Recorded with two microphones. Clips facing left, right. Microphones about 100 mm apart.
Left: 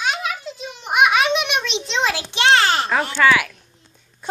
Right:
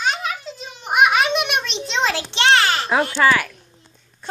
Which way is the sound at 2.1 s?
15° left (ahead or behind).